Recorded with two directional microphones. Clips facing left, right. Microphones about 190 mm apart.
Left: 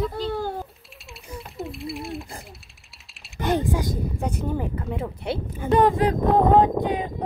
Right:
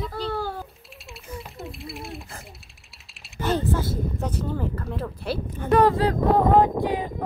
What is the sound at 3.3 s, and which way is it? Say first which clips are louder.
Speech: left 1 dB; 15° left (ahead or behind).